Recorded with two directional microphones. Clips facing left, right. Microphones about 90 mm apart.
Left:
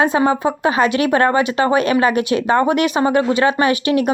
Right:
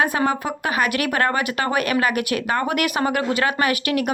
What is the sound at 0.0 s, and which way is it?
Speech, 25° left (ahead or behind).